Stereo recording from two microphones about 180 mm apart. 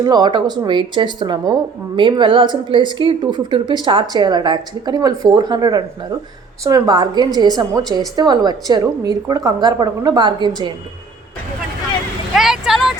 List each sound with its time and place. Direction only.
0.0 s a woman's voice: 20° right (ahead or behind)
12.4 s vehicle: centre (ahead or behind)